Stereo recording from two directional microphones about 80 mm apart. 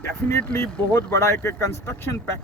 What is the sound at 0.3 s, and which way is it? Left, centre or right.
Speech, left.